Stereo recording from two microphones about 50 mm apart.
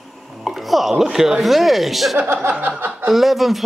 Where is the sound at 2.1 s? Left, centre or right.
Right.